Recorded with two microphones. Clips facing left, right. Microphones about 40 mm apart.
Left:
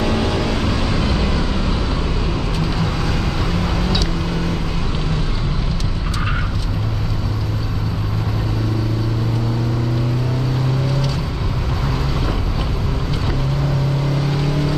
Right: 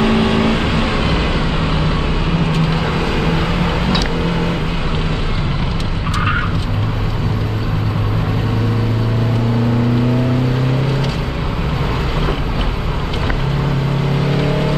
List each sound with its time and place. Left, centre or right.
0.0 s vehicle: right
14.2 s vehicle: right